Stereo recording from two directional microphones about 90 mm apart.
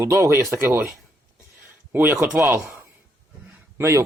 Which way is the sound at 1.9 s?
20° right (ahead or behind).